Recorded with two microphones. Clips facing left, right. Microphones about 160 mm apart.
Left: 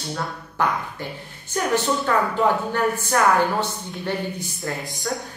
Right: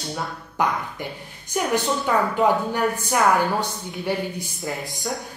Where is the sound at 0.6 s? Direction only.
15° right (ahead or behind).